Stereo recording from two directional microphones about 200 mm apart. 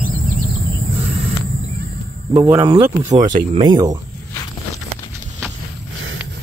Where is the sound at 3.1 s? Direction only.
35° right (ahead or behind).